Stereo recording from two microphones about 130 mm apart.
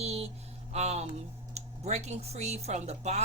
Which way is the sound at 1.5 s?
55° right (ahead or behind).